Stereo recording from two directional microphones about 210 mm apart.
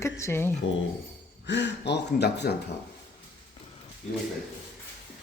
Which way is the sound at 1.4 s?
55° left (ahead or behind).